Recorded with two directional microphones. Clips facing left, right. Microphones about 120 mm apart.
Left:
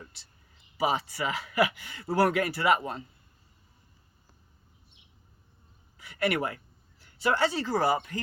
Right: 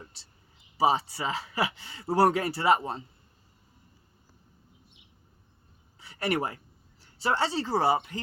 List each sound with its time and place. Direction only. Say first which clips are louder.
0.8 s speech: right 3 dB; 30° right (ahead or behind)
6.0 s a sound: left 1 dB; 30° right (ahead or behind)
7.0 s speech: left 1 dB; 30° right (ahead or behind)